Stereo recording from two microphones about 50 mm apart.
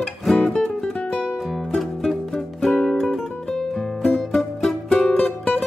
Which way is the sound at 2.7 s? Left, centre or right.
Centre.